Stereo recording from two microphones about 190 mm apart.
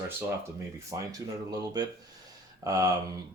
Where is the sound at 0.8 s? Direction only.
15° right (ahead or behind).